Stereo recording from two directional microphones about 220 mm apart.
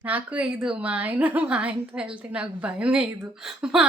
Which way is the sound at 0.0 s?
5° right (ahead or behind).